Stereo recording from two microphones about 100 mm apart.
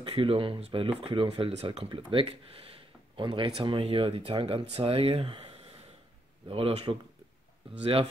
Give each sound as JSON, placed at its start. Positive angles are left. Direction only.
{"t": 0.0, "sound": "speech", "side_deg": -65}
{"t": 4.7, "sound": "speech", "side_deg": -75}
{"t": 7.7, "sound": "speech", "side_deg": -70}